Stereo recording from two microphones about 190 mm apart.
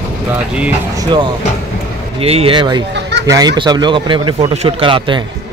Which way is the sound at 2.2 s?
30° right (ahead or behind).